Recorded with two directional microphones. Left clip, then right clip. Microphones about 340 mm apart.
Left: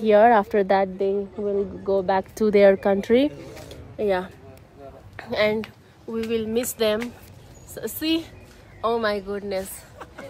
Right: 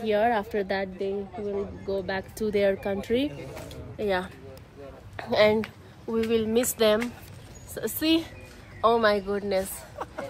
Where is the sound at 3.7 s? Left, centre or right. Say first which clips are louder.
Left 4 dB; centre.